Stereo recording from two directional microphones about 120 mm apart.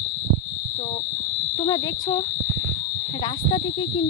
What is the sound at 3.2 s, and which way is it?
Speech, 45° left (ahead or behind).